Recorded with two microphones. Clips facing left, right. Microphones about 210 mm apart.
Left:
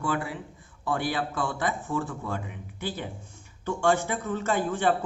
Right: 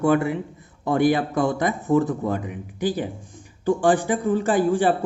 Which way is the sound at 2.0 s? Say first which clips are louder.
Right 10 dB; 40° right (ahead or behind).